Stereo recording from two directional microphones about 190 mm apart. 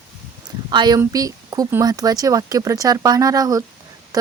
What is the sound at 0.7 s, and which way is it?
Speech, 20° right (ahead or behind).